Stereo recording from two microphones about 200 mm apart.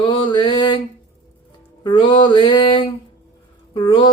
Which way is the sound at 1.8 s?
25° left (ahead or behind).